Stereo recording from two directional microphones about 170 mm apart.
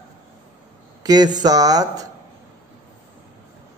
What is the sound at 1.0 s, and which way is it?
Speech, 25° right (ahead or behind).